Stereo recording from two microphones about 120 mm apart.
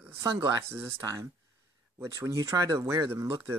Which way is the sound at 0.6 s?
20° right (ahead or behind).